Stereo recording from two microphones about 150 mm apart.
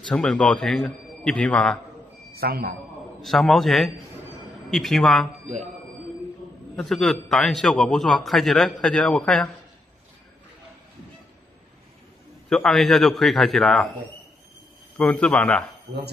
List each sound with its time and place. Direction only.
0.0 s a man's voice: 5° left (ahead or behind)
2.3 s a man's voice: 90° right
3.2 s a man's voice: centre (ahead or behind)
6.8 s a man's voice: 5° left (ahead or behind)
12.4 s a man's voice: centre (ahead or behind)
15.0 s a man's voice: 5° left (ahead or behind)